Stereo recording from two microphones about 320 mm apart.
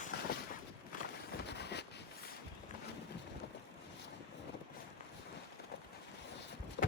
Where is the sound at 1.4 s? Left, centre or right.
Left.